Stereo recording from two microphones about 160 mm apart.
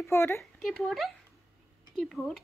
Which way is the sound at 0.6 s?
Centre (ahead or behind).